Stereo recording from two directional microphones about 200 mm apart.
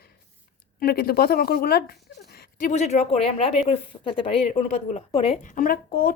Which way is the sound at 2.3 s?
40° left (ahead or behind).